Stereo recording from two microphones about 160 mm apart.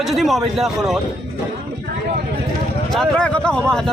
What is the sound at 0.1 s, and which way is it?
Speech, centre (ahead or behind).